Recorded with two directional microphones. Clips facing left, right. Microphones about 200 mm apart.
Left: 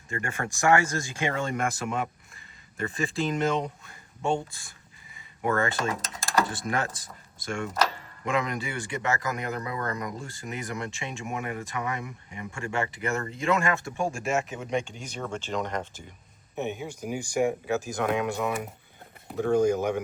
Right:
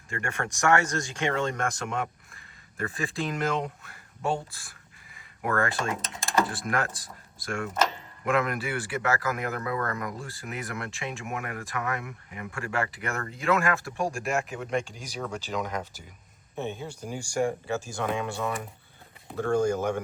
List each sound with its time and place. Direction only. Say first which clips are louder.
0.4 s speech: right 1 dB; 20° left (ahead or behind)
0.9 s speech: right 1 dB; 5° left (ahead or behind)
9.6 s speech: right 1 dB; 15° left (ahead or behind)
10.0 s speech: even; centre (ahead or behind)
16.6 s speech: left 2 dB; 15° left (ahead or behind)